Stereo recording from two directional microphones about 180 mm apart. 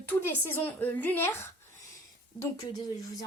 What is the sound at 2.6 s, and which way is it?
Speech, 20° left (ahead or behind).